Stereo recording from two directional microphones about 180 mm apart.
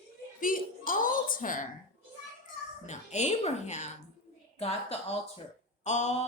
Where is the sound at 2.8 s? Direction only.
40° left (ahead or behind).